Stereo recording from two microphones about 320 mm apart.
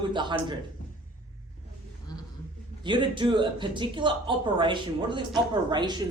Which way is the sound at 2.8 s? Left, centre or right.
Centre.